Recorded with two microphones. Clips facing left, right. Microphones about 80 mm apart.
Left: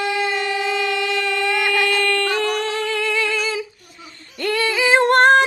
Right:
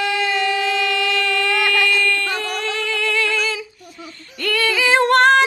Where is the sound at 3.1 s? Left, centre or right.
Centre.